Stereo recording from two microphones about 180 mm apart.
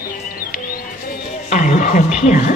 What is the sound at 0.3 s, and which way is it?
Music, 55° left (ahead or behind).